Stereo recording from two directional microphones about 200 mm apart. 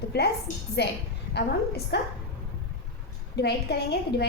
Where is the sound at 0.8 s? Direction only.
55° left (ahead or behind).